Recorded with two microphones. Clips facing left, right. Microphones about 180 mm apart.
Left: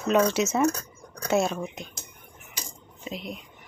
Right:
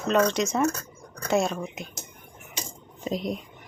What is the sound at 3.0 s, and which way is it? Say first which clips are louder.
Speech: right 7 dB; 40° right (ahead or behind).